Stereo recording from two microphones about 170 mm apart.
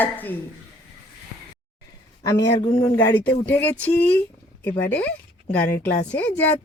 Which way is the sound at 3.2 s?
10° left (ahead or behind).